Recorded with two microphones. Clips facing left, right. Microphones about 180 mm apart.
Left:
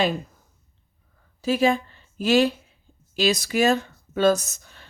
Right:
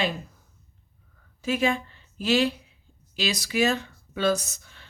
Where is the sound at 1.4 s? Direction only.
35° left (ahead or behind).